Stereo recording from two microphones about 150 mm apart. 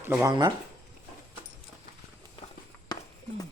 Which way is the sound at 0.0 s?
20° right (ahead or behind).